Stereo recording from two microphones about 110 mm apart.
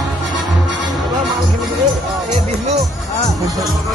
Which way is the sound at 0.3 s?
40° right (ahead or behind).